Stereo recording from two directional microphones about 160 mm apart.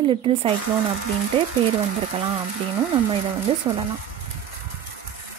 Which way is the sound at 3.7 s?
25° right (ahead or behind).